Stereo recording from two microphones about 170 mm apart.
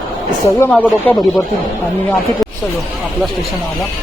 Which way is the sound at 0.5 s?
10° left (ahead or behind).